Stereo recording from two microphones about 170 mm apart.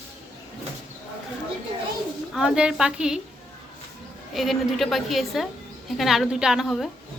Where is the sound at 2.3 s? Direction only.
5° right (ahead or behind).